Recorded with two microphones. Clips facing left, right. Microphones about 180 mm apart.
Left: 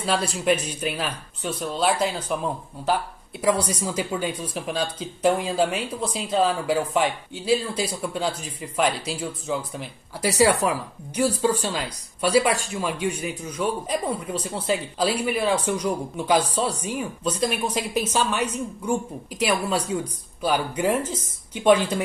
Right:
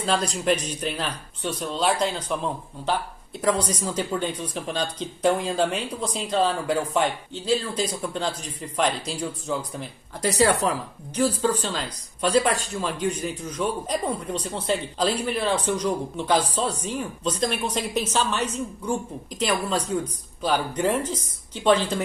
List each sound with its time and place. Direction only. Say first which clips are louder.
0.0 s speech: even; 5° left (ahead or behind)